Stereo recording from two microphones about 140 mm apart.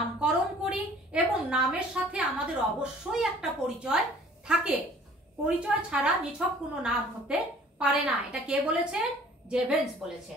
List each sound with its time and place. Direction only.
0.2 s a woman's voice: 5° right (ahead or behind)
5.4 s a woman's voice: 10° right (ahead or behind)